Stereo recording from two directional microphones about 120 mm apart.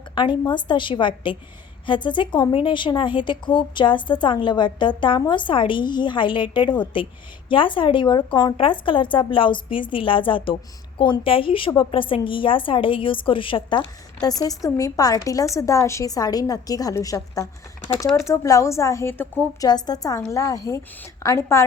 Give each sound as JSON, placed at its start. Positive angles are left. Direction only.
{"t": 0.1, "sound": "a woman's voice", "side_deg": 40}
{"t": 19.6, "sound": "a woman's voice", "side_deg": 35}